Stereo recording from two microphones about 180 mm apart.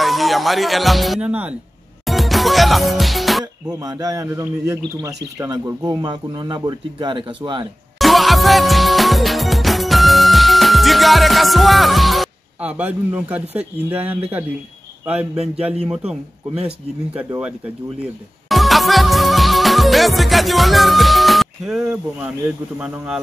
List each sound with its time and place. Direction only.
0.0 s speech: centre (ahead or behind)
2.0 s music: centre (ahead or behind)
3.6 s speech: 20° right (ahead or behind)
8.0 s music: centre (ahead or behind)
15.3 s speech: 35° right (ahead or behind)
15.6 s speech: 5° right (ahead or behind)
18.5 s music: centre (ahead or behind)
22.8 s speech: 5° right (ahead or behind)